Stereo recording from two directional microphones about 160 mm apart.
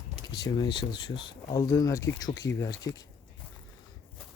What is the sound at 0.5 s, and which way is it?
Speech, 30° left (ahead or behind).